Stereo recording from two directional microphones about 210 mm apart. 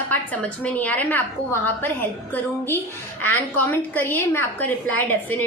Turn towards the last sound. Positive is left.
turn(degrees=10)  # may be behind; listen again after turning